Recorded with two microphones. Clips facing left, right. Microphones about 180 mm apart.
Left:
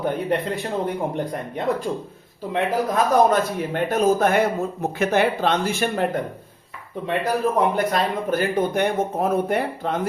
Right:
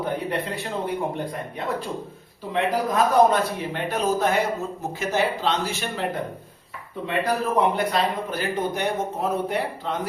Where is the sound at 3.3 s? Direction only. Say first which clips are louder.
Left 3 dB; 45° left (ahead or behind).